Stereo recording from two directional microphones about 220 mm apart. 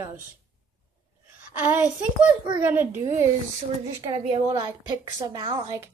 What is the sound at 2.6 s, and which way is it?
Speech, 10° right (ahead or behind).